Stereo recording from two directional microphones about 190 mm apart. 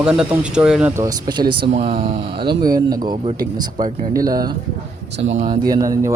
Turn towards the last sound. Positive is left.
turn(degrees=-15)  # may be behind; listen again after turning